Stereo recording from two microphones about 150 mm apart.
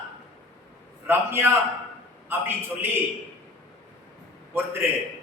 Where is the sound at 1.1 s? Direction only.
15° right (ahead or behind).